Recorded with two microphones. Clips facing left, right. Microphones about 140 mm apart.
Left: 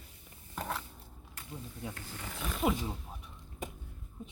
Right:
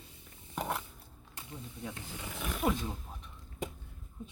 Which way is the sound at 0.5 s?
15° right (ahead or behind).